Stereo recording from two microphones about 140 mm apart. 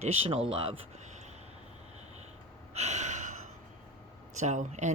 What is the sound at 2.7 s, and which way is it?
Gasp, 55° right (ahead or behind).